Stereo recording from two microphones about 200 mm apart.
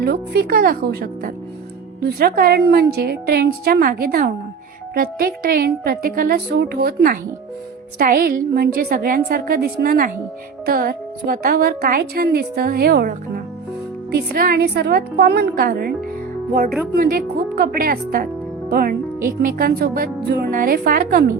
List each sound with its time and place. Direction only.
0.0 s speech: 50° right (ahead or behind)
16.9 s speech: 50° right (ahead or behind)